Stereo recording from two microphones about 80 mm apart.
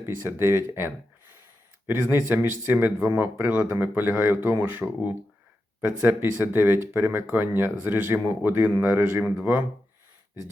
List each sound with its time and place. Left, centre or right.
0.0 s speech: right